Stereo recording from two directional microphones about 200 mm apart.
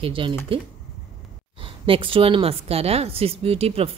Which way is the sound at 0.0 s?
25° right (ahead or behind).